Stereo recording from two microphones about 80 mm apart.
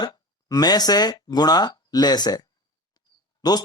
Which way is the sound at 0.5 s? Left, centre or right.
Left.